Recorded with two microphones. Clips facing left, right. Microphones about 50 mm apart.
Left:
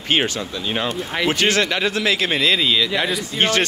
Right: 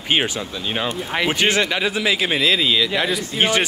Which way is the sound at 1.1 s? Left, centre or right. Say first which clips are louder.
Even; centre.